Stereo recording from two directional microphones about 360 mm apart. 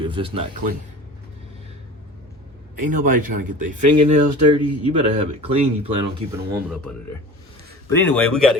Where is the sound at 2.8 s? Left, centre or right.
Right.